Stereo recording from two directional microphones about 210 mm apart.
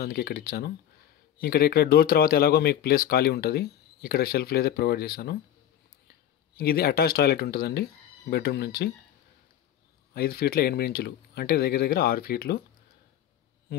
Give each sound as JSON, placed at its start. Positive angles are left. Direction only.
{"t": 0.0, "sound": "speech", "side_deg": 45}
{"t": 6.5, "sound": "speech", "side_deg": 45}
{"t": 10.1, "sound": "speech", "side_deg": 45}
{"t": 13.7, "sound": "speech", "side_deg": 50}